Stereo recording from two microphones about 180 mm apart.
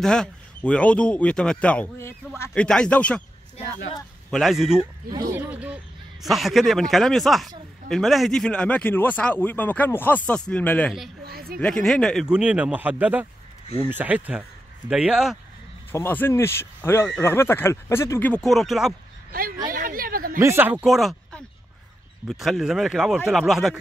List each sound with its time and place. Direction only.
0.0 s speech: 5° left (ahead or behind)
4.3 s speech: centre (ahead or behind)
5.1 s speech: 20° right (ahead or behind)
5.5 s speech: 5° right (ahead or behind)
11.2 s speech: 55° right (ahead or behind)
11.6 s speech: 5° left (ahead or behind)
15.9 s speech: 10° left (ahead or behind)
19.7 s a sound: 50° right (ahead or behind)
20.3 s speech: 15° right (ahead or behind)